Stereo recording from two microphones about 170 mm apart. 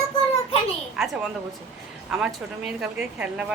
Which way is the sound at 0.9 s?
Centre (ahead or behind).